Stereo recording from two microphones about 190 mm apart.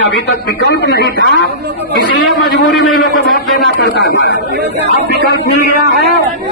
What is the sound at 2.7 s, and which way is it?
Speech, centre (ahead or behind).